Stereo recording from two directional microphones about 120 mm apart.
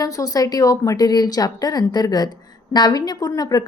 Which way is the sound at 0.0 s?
30° left (ahead or behind).